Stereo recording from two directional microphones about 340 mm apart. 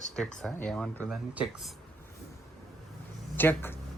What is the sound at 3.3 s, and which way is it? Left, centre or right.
Speech, centre.